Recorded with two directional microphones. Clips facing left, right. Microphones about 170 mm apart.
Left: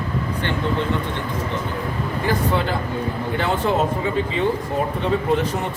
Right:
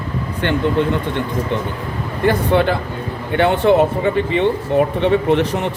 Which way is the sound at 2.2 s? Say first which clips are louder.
Right 7 dB; 65° right (ahead or behind).